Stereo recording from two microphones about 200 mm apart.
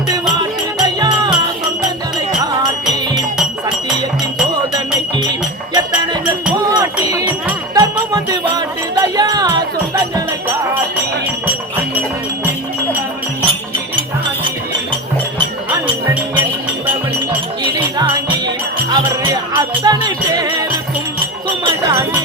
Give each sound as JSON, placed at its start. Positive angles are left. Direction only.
{"t": 0.1, "sound": "music", "side_deg": -20}
{"t": 4.7, "sound": "music", "side_deg": -20}
{"t": 6.6, "sound": "chink", "side_deg": -15}
{"t": 7.0, "sound": "a sound", "side_deg": -20}
{"t": 7.8, "sound": "music", "side_deg": -20}
{"t": 13.4, "sound": "music", "side_deg": -25}
{"t": 17.6, "sound": "music", "side_deg": -25}
{"t": 21.6, "sound": "jingle bell", "side_deg": -15}